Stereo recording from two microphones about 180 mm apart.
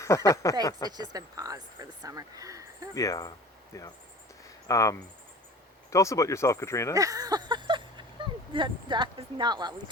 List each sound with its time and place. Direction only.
0.0 s speech: 15° left (ahead or behind)
0.9 s speech: 25° right (ahead or behind)
2.9 s speech: 20° left (ahead or behind)
6.9 s speech: 20° right (ahead or behind)